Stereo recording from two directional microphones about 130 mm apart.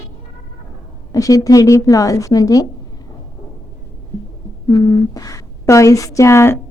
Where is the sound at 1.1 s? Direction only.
25° left (ahead or behind).